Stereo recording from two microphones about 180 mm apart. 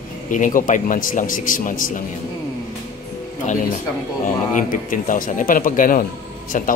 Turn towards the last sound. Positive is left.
turn(degrees=45)  # may be behind; listen again after turning